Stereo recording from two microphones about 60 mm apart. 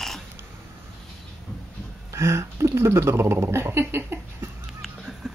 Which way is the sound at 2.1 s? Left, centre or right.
Right.